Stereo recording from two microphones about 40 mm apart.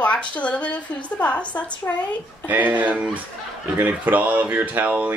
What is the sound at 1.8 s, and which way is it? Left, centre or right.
Speech, left.